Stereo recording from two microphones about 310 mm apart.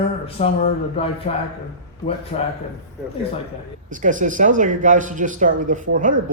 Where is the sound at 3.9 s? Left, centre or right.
Right.